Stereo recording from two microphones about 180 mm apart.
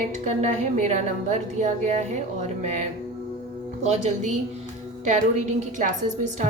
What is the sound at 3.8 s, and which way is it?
A woman's voice, 40° right (ahead or behind).